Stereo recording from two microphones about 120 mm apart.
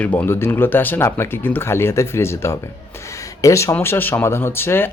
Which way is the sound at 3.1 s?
25° left (ahead or behind).